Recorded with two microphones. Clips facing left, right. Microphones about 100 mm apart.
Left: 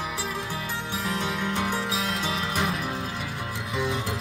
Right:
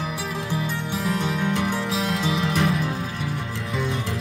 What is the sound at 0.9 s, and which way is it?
Music, centre (ahead or behind).